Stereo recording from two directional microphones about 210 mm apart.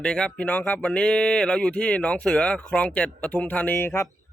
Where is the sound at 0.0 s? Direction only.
5° left (ahead or behind).